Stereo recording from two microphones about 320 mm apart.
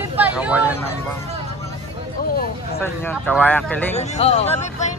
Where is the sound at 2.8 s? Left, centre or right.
Centre.